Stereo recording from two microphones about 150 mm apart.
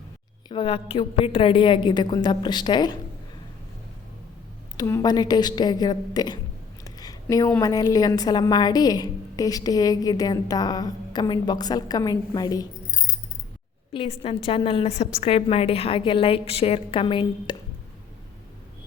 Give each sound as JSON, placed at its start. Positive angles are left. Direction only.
{"t": 0.4, "sound": "a woman's voice", "side_deg": 35}
{"t": 4.8, "sound": "a woman's voice", "side_deg": 25}
{"t": 6.8, "sound": "a sound", "side_deg": 25}
{"t": 7.6, "sound": "a woman's voice", "side_deg": 25}
{"t": 13.9, "sound": "a woman's voice", "side_deg": 35}